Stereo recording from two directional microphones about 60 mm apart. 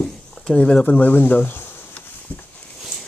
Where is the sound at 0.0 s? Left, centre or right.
Centre; by 1.9 s left.